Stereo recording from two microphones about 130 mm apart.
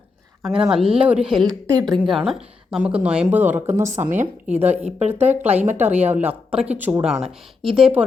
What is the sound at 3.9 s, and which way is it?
Speech, 75° right (ahead or behind).